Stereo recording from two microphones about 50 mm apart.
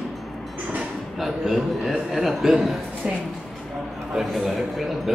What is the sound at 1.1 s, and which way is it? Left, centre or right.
A man's voice, centre.